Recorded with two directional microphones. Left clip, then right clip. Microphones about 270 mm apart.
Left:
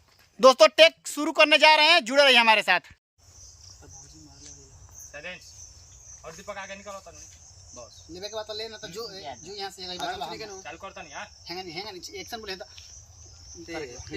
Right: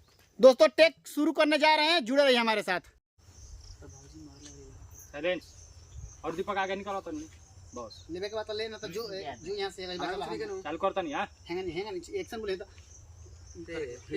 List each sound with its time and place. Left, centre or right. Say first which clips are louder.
0.3 s speech: left 4 dB; centre
6.4 s speech: right 6 dB; right
8.1 s speech: even; centre
10.7 s speech: right 9 dB; right
11.4 s speech: right 1 dB; centre
13.7 s speech: left 1 dB; centre